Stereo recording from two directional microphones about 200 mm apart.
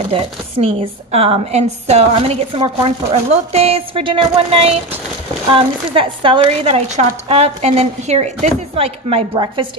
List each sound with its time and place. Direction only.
0.1 s speech: 30° right (ahead or behind)